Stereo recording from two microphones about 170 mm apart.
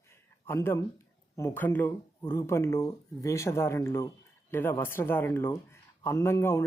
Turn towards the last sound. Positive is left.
turn(degrees=15)  # may be behind; listen again after turning